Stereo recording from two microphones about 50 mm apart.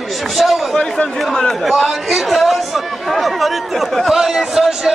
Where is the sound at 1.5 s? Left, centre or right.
Centre.